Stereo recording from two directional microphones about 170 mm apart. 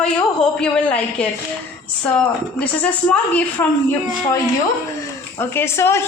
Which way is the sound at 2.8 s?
10° left (ahead or behind).